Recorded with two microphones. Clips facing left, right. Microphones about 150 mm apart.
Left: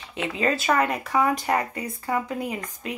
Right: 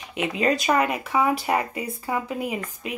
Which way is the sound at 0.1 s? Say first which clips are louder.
Right 2 dB; 15° right (ahead or behind).